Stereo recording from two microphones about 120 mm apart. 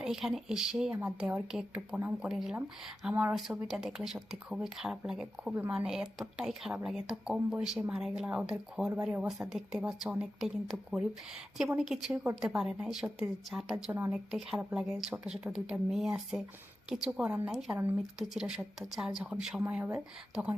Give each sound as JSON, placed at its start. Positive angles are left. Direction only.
{"t": 0.0, "sound": "speech", "side_deg": 0}
{"t": 0.9, "sound": "speech", "side_deg": -15}